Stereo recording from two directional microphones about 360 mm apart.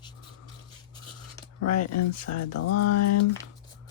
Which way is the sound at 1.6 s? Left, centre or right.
Left.